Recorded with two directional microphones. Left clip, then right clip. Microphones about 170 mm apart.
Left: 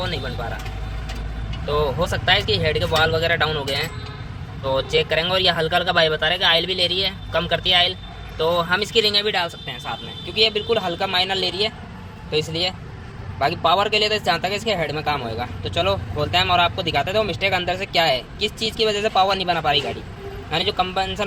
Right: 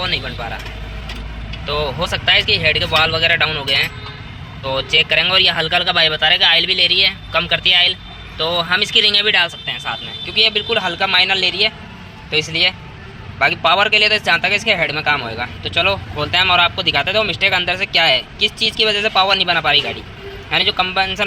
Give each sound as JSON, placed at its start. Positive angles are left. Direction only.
{"t": 1.6, "sound": "a man's voice", "side_deg": 15}